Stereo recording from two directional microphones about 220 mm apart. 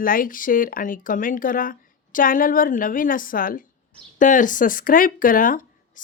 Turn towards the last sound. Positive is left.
turn(degrees=40)  # may be behind; listen again after turning